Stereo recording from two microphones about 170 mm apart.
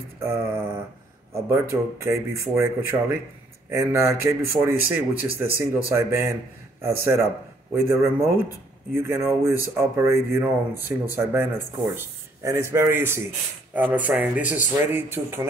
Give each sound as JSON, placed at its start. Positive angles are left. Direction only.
{"t": 0.2, "sound": "speech", "side_deg": -15}